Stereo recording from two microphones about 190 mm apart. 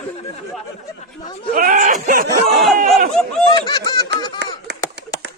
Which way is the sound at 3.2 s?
5° left (ahead or behind).